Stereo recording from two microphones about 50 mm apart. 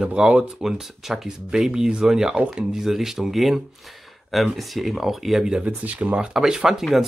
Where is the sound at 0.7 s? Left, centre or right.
Centre.